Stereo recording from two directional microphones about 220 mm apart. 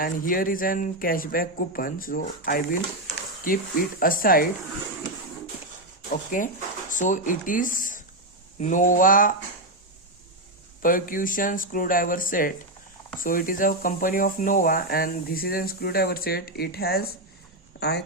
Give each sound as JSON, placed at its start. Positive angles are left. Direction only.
{"t": 0.0, "sound": "speech", "side_deg": 40}
{"t": 6.1, "sound": "speech", "side_deg": 35}
{"t": 10.8, "sound": "speech", "side_deg": 40}